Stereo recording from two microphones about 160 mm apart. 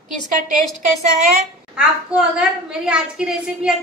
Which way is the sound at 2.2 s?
5° right (ahead or behind).